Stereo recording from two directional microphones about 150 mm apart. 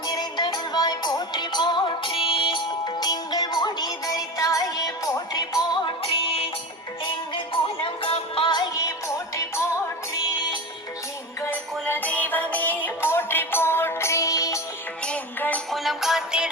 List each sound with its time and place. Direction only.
0.0 s music: 30° left (ahead or behind)
11.9 s music: 10° left (ahead or behind)
15.0 s music: 10° left (ahead or behind)
15.7 s music: centre (ahead or behind)